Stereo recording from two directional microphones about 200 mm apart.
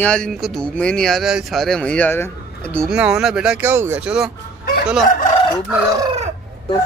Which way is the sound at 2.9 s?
5° right (ahead or behind).